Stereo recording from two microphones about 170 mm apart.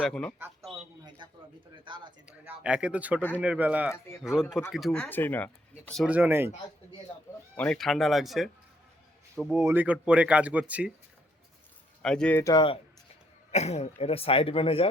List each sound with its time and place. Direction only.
0.0 s speech: 5° left (ahead or behind)
1.8 s speech: 30° right (ahead or behind)
2.2 s speech: 10° right (ahead or behind); by 5.5 s 10° left (ahead or behind)
6.1 s speech: 10° right (ahead or behind)
7.5 s speech: 10° left (ahead or behind)
9.6 s speech: 15° right (ahead or behind)
12.0 s speech: 5° left (ahead or behind)
12.4 s speech: 15° left (ahead or behind)
13.5 s speech: 40° left (ahead or behind)